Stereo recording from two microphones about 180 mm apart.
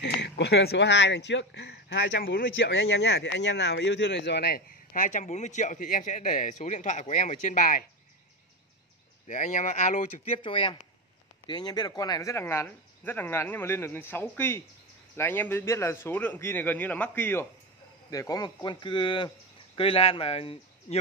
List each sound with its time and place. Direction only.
0.0 s speech: 70° left (ahead or behind); by 7.8 s 45° left (ahead or behind)
9.3 s speech: 45° left (ahead or behind)
10.4 s speech: 25° left (ahead or behind)